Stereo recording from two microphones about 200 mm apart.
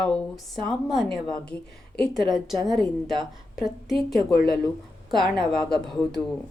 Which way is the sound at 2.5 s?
20° right (ahead or behind).